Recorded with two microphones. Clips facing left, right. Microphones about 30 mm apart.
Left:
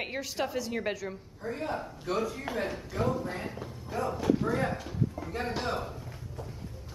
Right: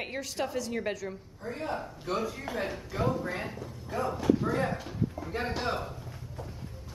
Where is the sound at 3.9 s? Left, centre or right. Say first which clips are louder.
Right 1 dB; centre.